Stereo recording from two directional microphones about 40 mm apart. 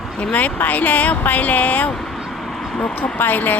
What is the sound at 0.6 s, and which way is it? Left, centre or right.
Speech, left.